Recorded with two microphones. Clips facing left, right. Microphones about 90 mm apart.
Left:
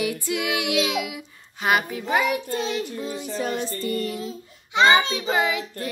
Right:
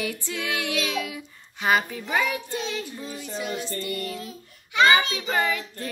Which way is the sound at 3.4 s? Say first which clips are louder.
Left 4 dB; 40° left (ahead or behind).